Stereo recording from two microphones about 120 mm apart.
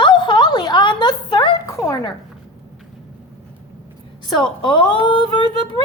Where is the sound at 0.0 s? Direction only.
40° left (ahead or behind).